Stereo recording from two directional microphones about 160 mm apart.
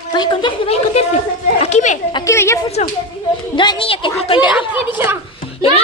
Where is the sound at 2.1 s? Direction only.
20° left (ahead or behind).